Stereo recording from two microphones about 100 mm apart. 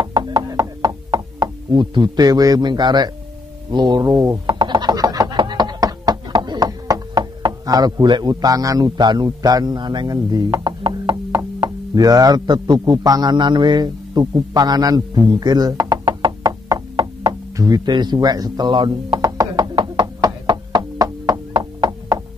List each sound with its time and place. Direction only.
0.0 s chopping: 45° right (ahead or behind)
3.7 s speech: 45° right (ahead or behind)
4.0 s speech: 35° right (ahead or behind)
4.6 s a sound: 50° right (ahead or behind)
16.9 s knock: 50° right (ahead or behind)
17.6 s a sound: 40° right (ahead or behind)